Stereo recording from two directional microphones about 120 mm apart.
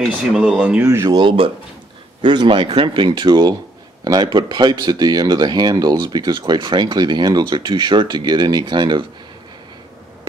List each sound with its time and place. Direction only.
0.1 s speech: 10° right (ahead or behind)
0.8 s speech: 25° right (ahead or behind)
1.1 s speech: 45° right (ahead or behind)